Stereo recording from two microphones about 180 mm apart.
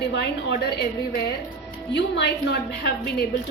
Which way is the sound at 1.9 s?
75° left (ahead or behind).